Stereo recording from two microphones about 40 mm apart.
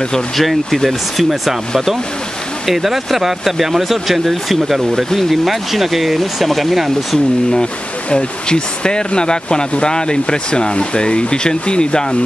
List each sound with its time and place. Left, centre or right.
0.4 s speech: centre
2.6 s speech: centre
8.1 s speech: left